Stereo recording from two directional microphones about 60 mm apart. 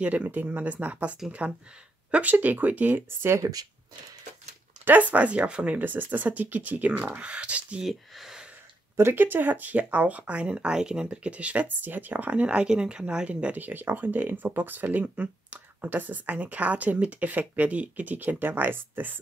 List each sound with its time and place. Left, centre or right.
0.0 s speech: right
3.1 s speech: right
3.3 s speech: right
4.8 s speech: right
7.8 s speech: centre
8.9 s speech: right